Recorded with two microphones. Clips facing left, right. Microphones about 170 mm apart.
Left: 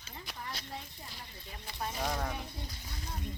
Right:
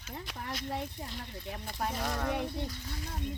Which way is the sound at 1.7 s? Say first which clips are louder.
Right 3 dB; 55° right (ahead or behind).